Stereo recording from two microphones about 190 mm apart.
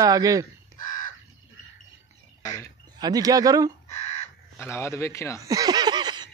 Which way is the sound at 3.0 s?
20° right (ahead or behind).